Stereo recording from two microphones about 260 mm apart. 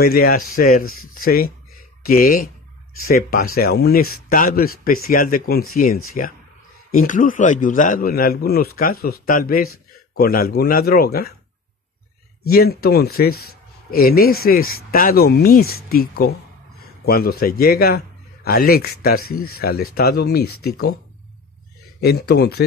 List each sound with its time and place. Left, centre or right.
0.0 s a man's voice: left
6.9 s a man's voice: left
12.4 s a man's voice: left
22.0 s a man's voice: left